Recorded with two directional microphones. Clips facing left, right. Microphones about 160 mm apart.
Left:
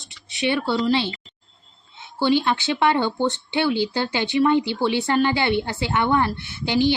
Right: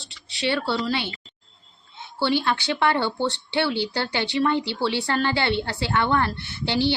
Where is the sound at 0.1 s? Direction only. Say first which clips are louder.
Left 2 dB; 20° left (ahead or behind).